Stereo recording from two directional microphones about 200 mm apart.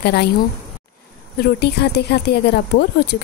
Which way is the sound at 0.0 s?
55° left (ahead or behind).